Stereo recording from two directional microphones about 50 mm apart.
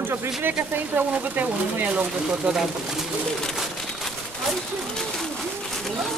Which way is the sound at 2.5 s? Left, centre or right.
Centre.